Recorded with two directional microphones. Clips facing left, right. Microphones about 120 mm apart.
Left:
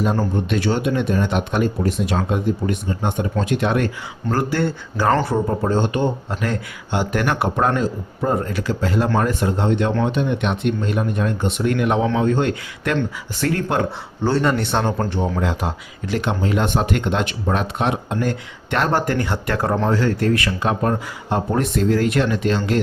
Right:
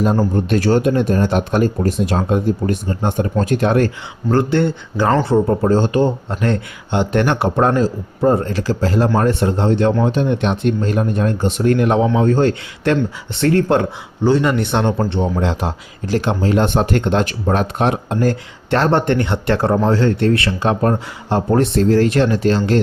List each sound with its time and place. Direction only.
0.5 s speech: 40° right (ahead or behind)
14.3 s speech: 15° right (ahead or behind); by 22.8 s 35° right (ahead or behind)